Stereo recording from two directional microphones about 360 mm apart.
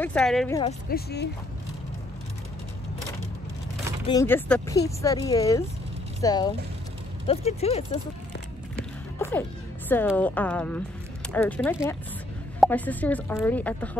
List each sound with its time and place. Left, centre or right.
0.0 s speech: centre
0.6 s speech: left
4.0 s speech: centre
9.8 s speech: centre